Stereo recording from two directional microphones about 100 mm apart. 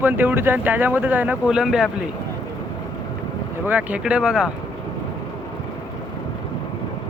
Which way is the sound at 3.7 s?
15° right (ahead or behind).